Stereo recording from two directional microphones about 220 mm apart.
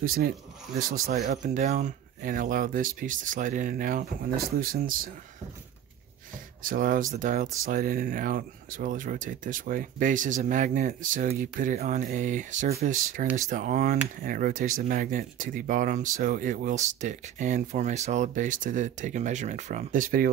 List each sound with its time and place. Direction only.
0.0 s speech: 40° right (ahead or behind)
6.6 s speech: 40° right (ahead or behind)